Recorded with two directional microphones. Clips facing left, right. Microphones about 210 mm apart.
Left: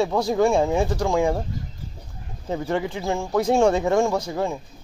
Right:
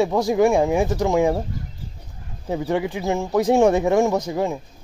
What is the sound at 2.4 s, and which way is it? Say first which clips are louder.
A man's voice: right 2 dB; 15° right (ahead or behind).